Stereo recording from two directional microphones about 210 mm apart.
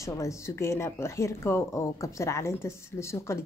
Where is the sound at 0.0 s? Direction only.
15° left (ahead or behind).